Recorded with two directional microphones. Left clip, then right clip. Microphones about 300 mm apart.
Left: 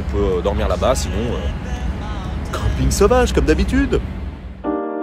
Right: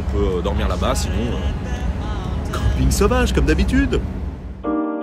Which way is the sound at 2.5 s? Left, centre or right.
Centre.